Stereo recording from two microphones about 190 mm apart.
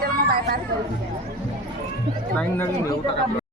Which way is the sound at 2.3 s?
10° left (ahead or behind).